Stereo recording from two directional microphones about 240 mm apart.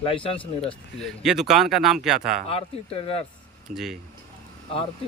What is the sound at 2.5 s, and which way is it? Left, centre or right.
Speech, left.